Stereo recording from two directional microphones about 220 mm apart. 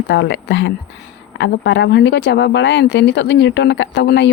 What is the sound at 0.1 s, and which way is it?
A woman's voice, 55° left (ahead or behind).